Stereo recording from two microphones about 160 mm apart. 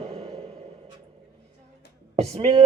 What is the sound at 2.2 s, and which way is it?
Speech, 40° right (ahead or behind).